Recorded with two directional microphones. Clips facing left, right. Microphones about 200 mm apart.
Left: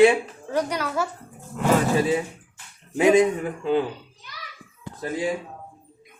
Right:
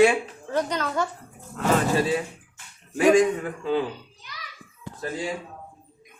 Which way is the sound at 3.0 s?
20° left (ahead or behind).